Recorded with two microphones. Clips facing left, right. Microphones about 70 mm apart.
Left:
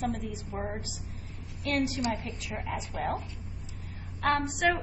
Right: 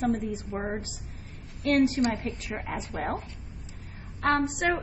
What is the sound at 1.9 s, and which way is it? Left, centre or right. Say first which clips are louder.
A woman's voice: right 5 dB; right.